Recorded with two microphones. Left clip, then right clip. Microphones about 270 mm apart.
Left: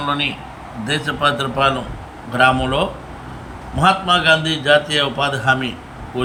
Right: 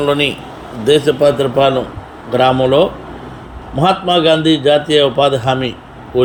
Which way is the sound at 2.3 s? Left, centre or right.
Centre.